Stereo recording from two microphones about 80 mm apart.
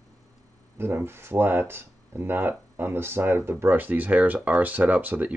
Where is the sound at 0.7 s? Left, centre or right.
Right.